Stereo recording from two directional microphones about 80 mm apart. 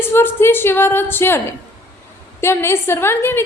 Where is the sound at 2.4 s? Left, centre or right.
Left.